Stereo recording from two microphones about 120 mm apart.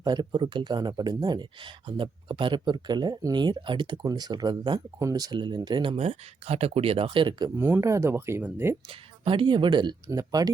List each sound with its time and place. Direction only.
0.0 s speech: 35° right (ahead or behind)
6.0 s speech: 60° right (ahead or behind); by 7.5 s 40° right (ahead or behind)
7.5 s speech: 20° right (ahead or behind)
8.9 s speech: 50° right (ahead or behind)
10.1 s speech: 30° right (ahead or behind)